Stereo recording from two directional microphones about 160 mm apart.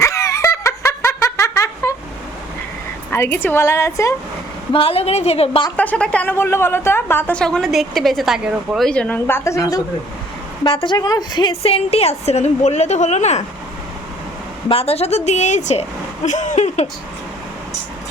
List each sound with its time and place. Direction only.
0.0 s laughter: 20° left (ahead or behind)
3.1 s a woman's voice: 15° left (ahead or behind)
4.7 s a woman's voice: 35° left (ahead or behind)
5.7 s a woman's voice: 10° left (ahead or behind)
8.9 s a woman's voice: 10° left (ahead or behind)
10.6 s a woman's voice: 30° left (ahead or behind)
14.7 s a woman's voice: 40° left (ahead or behind)